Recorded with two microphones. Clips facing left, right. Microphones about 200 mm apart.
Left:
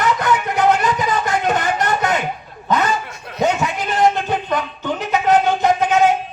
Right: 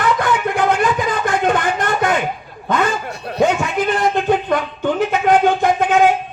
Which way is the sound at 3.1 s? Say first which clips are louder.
Right 7 dB; 35° right (ahead or behind).